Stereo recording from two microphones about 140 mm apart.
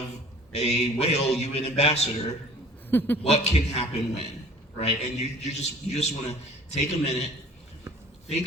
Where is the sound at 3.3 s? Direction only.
50° left (ahead or behind).